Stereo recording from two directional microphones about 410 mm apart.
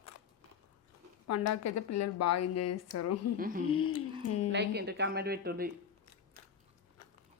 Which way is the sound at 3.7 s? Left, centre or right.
Left.